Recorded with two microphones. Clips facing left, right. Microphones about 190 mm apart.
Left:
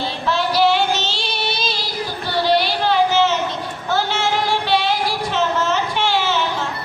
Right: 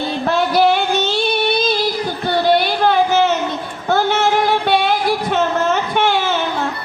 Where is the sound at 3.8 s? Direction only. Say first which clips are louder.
Right 5 dB; 50° right (ahead or behind).